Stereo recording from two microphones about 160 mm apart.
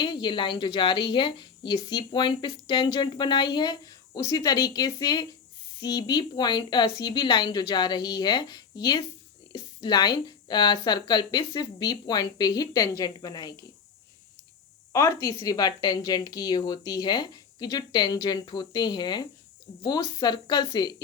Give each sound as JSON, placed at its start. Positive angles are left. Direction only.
{"t": 0.0, "sound": "a woman's voice", "side_deg": 30}
{"t": 14.9, "sound": "a woman's voice", "side_deg": 20}